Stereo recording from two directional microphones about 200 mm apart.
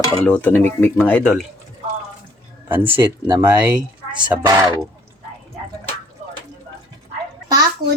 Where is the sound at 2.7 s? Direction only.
10° right (ahead or behind).